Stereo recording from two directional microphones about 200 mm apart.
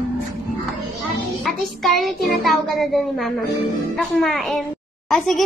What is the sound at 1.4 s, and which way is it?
Child singing, centre (ahead or behind).